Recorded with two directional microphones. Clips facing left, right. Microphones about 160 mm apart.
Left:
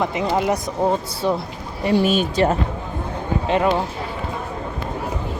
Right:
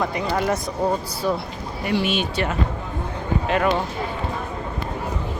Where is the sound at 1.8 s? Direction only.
35° left (ahead or behind).